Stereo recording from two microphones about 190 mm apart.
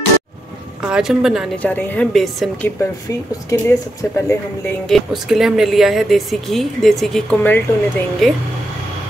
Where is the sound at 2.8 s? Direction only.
15° left (ahead or behind).